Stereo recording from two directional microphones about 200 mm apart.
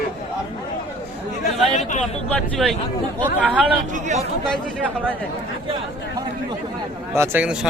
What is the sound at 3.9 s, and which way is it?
Speech, 35° right (ahead or behind).